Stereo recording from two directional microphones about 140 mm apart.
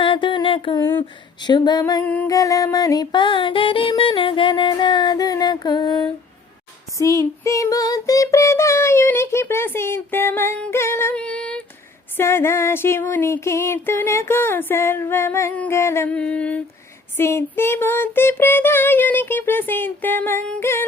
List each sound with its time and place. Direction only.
0.0 s a sound: 35° left (ahead or behind)
0.8 s child singing: 15° left (ahead or behind)
1.4 s music: 30° left (ahead or behind)
7.0 s child singing: 20° left (ahead or behind)